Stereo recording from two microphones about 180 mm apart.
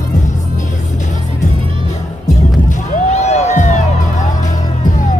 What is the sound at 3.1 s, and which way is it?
Music, 40° left (ahead or behind).